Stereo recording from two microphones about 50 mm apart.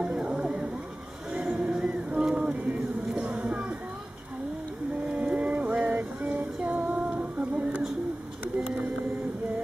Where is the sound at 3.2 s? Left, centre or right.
Right.